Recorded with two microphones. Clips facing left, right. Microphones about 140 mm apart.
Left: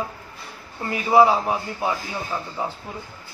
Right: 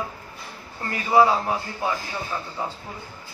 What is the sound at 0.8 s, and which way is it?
A man's voice, 15° left (ahead or behind).